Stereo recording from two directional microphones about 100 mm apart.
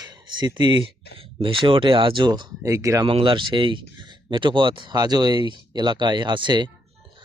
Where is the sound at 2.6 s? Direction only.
30° right (ahead or behind).